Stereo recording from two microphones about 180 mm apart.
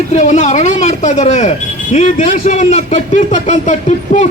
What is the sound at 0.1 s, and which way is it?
A man's voice, 40° left (ahead or behind).